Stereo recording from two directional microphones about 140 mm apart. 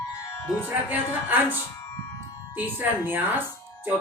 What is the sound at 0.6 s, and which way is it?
Speech, 15° right (ahead or behind).